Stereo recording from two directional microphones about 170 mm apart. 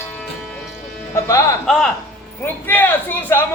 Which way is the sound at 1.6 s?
Centre (ahead or behind).